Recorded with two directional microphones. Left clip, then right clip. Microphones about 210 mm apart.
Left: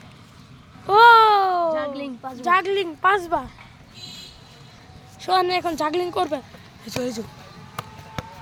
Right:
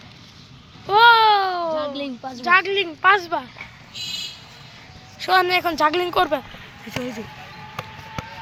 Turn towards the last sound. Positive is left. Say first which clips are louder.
# left 2 dB
turn(degrees=65)  # may be behind; listen again after turning